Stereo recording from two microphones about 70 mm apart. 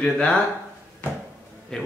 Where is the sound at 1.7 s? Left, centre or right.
Centre.